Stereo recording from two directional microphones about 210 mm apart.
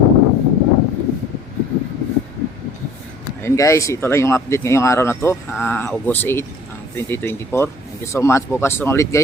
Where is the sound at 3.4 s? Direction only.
15° left (ahead or behind).